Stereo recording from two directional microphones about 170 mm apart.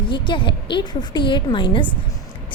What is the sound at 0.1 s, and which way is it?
A woman's voice, 30° left (ahead or behind).